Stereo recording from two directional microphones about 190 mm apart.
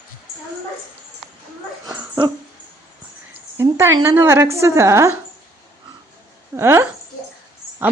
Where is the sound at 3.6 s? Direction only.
15° right (ahead or behind).